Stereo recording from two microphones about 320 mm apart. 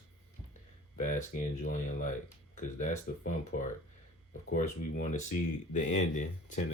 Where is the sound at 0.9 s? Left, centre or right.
Left.